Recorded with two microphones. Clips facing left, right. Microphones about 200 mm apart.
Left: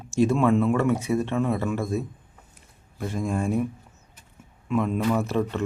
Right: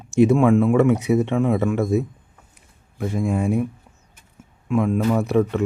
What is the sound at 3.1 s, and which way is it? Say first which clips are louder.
Speech: right 4 dB; 15° right (ahead or behind).